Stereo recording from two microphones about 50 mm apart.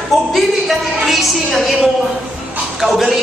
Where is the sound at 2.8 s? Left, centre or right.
Centre.